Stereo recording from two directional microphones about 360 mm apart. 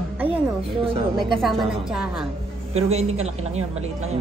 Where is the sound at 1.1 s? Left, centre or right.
Centre.